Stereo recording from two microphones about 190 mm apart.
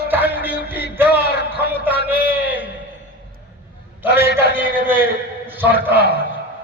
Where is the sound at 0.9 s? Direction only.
10° right (ahead or behind).